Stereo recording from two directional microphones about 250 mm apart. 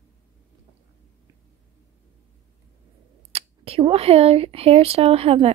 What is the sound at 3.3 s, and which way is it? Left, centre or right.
Speech, right.